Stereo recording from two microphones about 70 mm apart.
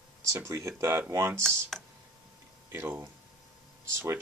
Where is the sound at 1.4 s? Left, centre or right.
Centre.